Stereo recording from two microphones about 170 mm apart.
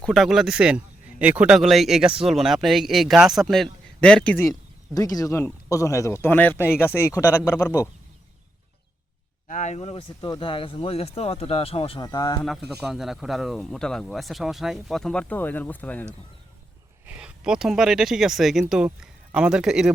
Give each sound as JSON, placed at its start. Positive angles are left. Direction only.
{"t": 0.0, "sound": "speech", "side_deg": 0}
{"t": 4.9, "sound": "speech", "side_deg": 20}
{"t": 9.5, "sound": "speech", "side_deg": 45}
{"t": 12.5, "sound": "speech", "side_deg": 0}
{"t": 17.1, "sound": "speech", "side_deg": -5}